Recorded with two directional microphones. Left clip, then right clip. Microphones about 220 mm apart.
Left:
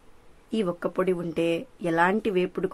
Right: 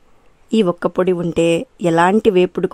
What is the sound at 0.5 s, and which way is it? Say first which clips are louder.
Speech: right 11 dB; 40° right (ahead or behind).